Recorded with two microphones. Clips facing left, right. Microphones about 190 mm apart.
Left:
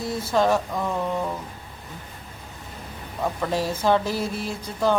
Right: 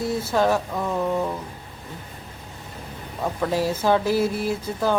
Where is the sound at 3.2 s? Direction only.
5° right (ahead or behind).